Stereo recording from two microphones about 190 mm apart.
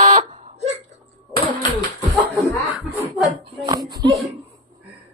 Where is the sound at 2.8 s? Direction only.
Centre (ahead or behind).